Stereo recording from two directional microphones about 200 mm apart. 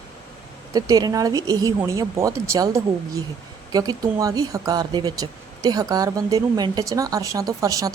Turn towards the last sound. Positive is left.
turn(degrees=-15)  # may be behind; listen again after turning